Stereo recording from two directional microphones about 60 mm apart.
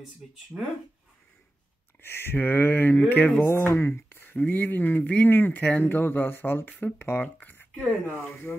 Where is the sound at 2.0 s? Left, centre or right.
Left.